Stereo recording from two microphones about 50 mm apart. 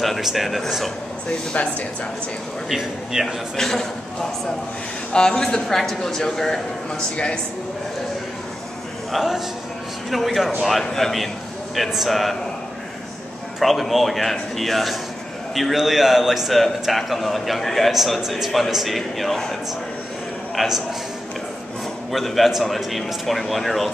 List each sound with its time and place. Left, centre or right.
0.0 s a sound: centre
0.3 s a man's voice: centre
1.5 s speech: left
2.7 s speech: centre
3.5 s speech: centre
9.1 s a man's voice: centre
13.6 s a man's voice: centre
20.5 s a man's voice: centre
22.1 s a man's voice: centre